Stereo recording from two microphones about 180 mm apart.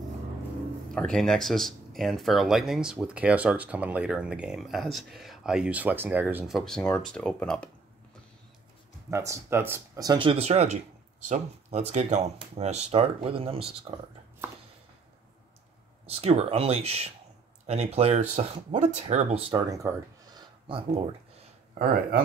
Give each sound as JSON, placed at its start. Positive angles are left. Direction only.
{"t": 0.9, "sound": "speech", "side_deg": 5}
{"t": 9.1, "sound": "speech", "side_deg": -15}
{"t": 16.1, "sound": "speech", "side_deg": -35}
{"t": 19.7, "sound": "speech", "side_deg": -20}